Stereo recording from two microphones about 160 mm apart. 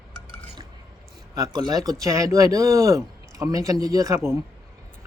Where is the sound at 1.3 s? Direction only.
25° right (ahead or behind).